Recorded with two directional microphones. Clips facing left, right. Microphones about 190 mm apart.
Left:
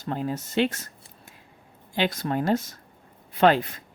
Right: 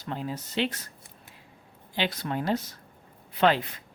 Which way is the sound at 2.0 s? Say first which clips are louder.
Left 4 dB; 45° left (ahead or behind).